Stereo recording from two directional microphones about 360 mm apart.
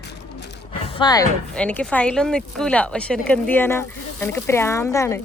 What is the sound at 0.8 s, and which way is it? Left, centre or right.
Speech, centre.